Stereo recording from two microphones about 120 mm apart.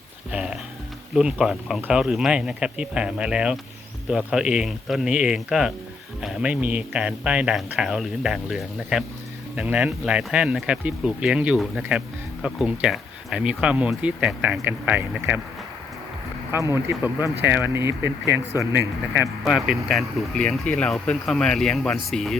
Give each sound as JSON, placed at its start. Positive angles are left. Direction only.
{"t": 0.3, "sound": "speech", "side_deg": -10}
{"t": 16.5, "sound": "speech", "side_deg": -25}
{"t": 19.5, "sound": "speech", "side_deg": -5}